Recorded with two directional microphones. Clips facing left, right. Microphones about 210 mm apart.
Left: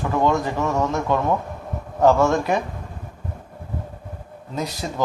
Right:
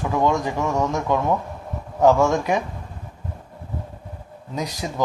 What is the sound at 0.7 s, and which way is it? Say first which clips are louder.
Speech: even; 5° left (ahead or behind).